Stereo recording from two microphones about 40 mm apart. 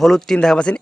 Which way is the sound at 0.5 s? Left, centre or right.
Left.